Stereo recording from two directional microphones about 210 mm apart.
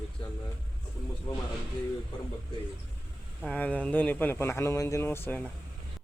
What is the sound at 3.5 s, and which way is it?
Speech, 5° left (ahead or behind).